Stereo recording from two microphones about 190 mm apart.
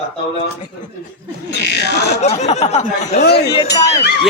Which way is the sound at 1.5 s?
60° left (ahead or behind).